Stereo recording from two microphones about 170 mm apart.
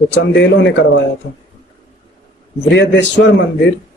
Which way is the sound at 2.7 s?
90° left.